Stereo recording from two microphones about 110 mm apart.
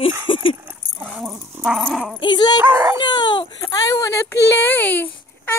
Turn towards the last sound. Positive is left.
turn(degrees=15)  # may be behind; listen again after turning